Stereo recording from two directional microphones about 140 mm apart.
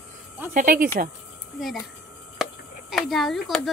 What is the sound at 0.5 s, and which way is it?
Speech, 80° right.